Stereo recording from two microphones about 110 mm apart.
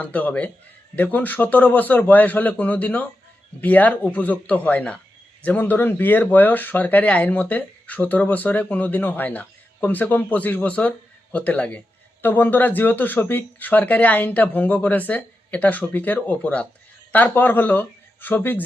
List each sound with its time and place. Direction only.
0.0 s speech: 15° left (ahead or behind)